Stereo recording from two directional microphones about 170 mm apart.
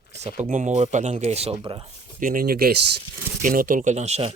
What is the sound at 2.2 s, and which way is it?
Speech, 55° right (ahead or behind).